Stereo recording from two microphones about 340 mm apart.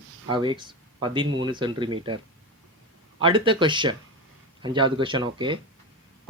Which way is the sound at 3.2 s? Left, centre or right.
Centre.